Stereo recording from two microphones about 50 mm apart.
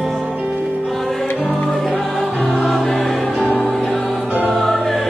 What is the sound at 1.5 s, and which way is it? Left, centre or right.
Music, centre.